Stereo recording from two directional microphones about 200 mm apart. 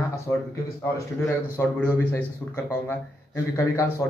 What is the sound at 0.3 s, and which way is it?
A man's voice, 15° left (ahead or behind).